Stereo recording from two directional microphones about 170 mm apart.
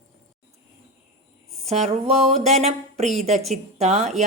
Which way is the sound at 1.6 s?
40° right (ahead or behind).